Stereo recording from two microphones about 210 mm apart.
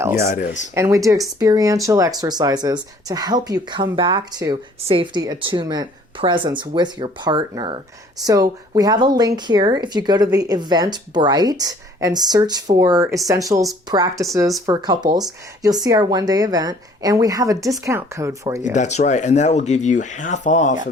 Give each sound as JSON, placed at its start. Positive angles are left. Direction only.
{"t": 0.2, "sound": "speech", "side_deg": 45}
{"t": 0.7, "sound": "a woman's voice", "side_deg": -15}
{"t": 18.6, "sound": "speech", "side_deg": 35}